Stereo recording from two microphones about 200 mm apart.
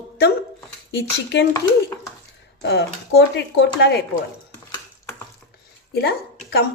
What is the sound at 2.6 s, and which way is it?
A woman's voice, 55° left (ahead or behind).